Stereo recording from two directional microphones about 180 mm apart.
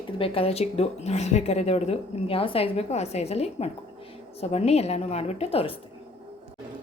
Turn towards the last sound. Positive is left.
turn(degrees=30)  # may be behind; listen again after turning